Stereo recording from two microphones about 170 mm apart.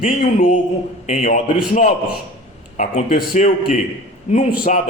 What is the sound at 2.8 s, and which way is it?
Speech, 50° left (ahead or behind).